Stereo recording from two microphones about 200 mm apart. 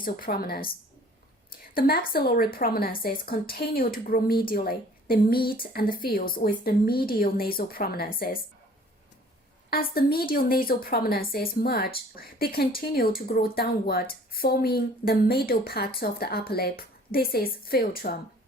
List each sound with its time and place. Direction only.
0.0 s a woman's voice: 45° left (ahead or behind)
1.7 s a woman's voice: 50° left (ahead or behind)
9.6 s a woman's voice: 50° left (ahead or behind)